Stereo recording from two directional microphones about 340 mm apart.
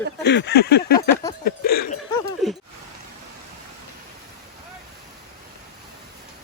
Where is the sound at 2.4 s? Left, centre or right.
Centre.